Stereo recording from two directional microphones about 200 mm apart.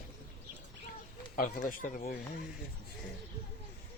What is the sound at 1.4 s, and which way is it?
Speech, 45° left (ahead or behind).